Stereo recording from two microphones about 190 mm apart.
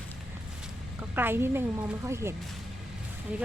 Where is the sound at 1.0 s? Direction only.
10° right (ahead or behind).